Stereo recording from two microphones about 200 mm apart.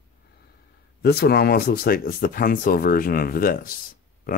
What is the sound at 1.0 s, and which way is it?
Speech, 50° left (ahead or behind).